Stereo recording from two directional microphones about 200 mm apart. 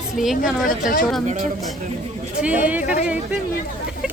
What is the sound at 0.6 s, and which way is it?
Speech, 45° left (ahead or behind).